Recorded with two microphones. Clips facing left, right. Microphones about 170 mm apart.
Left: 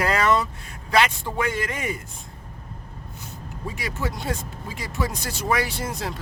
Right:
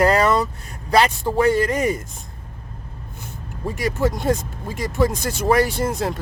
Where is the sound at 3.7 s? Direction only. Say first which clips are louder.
Right 9 dB; 45° right (ahead or behind).